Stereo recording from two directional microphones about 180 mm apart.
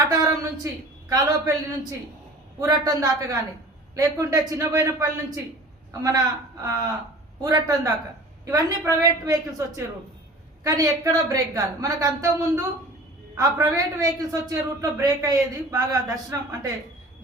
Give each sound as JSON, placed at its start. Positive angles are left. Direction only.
{"t": 0.1, "sound": "a sound", "side_deg": -20}
{"t": 1.1, "sound": "a woman's voice", "side_deg": -20}
{"t": 7.4, "sound": "a woman's voice", "side_deg": -20}